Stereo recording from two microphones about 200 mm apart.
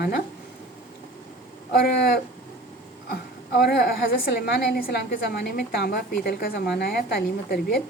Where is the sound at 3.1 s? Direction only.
55° left (ahead or behind).